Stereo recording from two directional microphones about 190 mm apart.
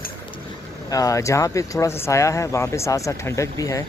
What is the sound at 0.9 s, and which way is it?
Speech, 15° left (ahead or behind).